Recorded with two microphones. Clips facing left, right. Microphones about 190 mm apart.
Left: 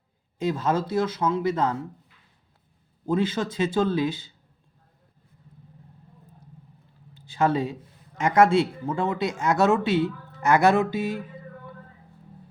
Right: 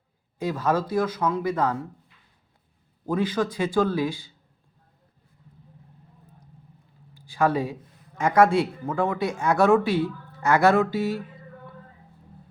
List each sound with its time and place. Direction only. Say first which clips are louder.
0.3 s speech: even; 25° left (ahead or behind)
3.1 s speech: even; 25° left (ahead or behind)
7.1 s a sound: even; 25° left (ahead or behind)
8.4 s speech: even; 25° left (ahead or behind)